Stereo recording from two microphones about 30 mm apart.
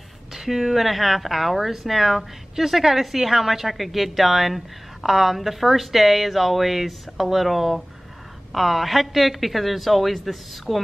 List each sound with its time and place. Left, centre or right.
0.3 s a woman's voice: centre